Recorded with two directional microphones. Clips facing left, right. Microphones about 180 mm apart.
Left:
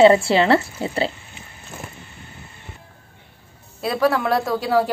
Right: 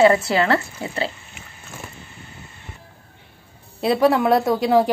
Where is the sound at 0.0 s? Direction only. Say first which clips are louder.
Left 3 dB; 25° left (ahead or behind).